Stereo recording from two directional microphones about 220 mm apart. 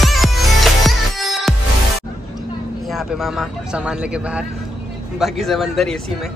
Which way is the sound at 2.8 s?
Centre (ahead or behind).